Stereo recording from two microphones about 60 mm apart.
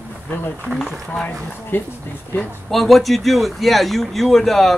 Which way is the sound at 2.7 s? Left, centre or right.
Centre.